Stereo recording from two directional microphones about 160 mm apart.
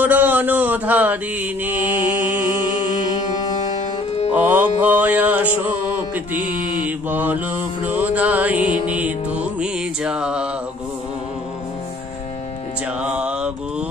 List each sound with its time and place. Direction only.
0.0 s mantra: 10° right (ahead or behind)
4.4 s mantra: 10° right (ahead or behind)
7.1 s mantra: 10° right (ahead or behind)
8.8 s music: 10° right (ahead or behind)
13.0 s mantra: 5° right (ahead or behind)